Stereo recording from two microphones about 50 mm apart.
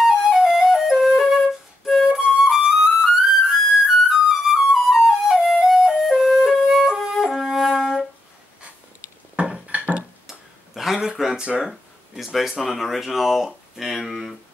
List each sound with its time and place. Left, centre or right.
0.0 s flute: centre
9.4 s music: right
10.7 s a sound: centre
12.4 s speech: centre